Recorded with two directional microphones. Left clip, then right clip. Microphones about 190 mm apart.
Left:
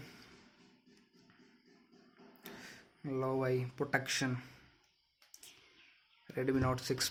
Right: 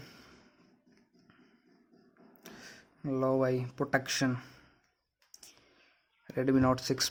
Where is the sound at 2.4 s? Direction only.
50° right (ahead or behind).